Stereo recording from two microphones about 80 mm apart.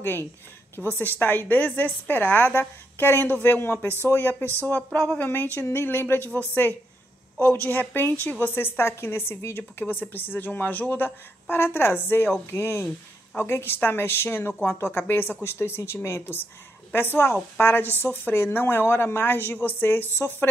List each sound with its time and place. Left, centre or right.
0.0 s a woman's voice: left
7.4 s a woman's voice: left